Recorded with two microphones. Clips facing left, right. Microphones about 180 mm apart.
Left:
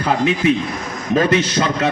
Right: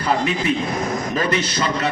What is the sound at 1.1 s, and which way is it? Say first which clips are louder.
Speech: left 10 dB; 55° left (ahead or behind).